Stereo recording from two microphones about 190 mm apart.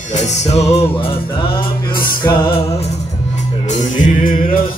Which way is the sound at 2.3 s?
25° left (ahead or behind).